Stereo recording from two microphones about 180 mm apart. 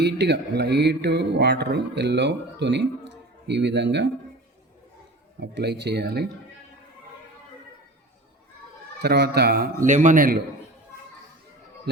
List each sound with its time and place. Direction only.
0.0 s speech: 70° right (ahead or behind)
5.4 s speech: 70° right (ahead or behind)
9.0 s a man's voice: 65° right (ahead or behind); by 10.3 s 45° right (ahead or behind)